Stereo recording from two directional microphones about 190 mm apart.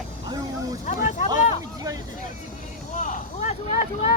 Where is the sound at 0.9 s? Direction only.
40° left (ahead or behind).